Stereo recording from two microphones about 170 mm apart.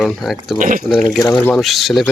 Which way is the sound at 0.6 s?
50° right (ahead or behind).